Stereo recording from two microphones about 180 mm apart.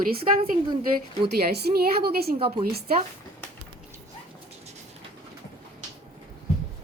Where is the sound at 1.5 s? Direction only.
60° right (ahead or behind).